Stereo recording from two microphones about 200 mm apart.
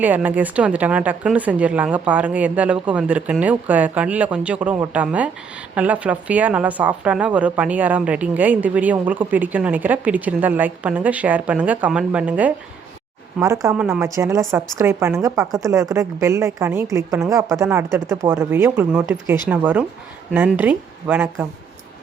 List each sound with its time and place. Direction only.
0.0 s a woman's voice: 10° right (ahead or behind)